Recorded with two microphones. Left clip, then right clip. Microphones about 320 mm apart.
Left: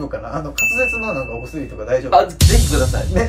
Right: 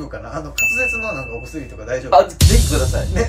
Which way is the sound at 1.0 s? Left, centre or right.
Centre.